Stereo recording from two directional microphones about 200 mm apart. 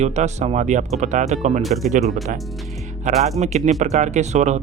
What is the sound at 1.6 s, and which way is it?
Speech, centre (ahead or behind).